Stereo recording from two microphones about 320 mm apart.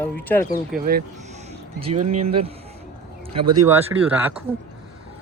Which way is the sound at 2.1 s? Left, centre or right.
Right.